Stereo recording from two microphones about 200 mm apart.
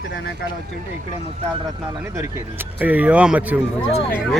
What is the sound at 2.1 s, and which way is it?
Speech, 10° right (ahead or behind).